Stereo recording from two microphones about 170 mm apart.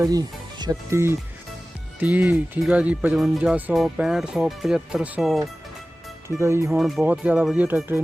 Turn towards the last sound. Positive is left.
turn(degrees=-10)  # may be behind; listen again after turning